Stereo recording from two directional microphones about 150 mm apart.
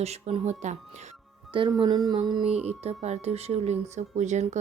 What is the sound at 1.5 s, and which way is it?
Speech, 30° right (ahead or behind).